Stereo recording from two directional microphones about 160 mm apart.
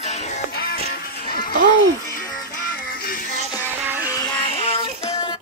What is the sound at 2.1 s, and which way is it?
Music, 55° left (ahead or behind).